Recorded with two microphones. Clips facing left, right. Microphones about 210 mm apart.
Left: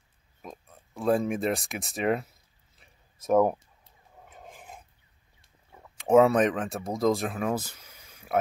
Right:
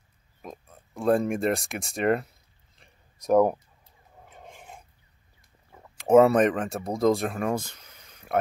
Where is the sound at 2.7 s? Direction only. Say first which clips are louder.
Right 2 dB; 5° left (ahead or behind).